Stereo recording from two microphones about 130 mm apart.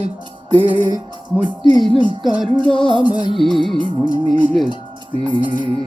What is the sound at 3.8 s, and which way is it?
Speech, 40° right (ahead or behind).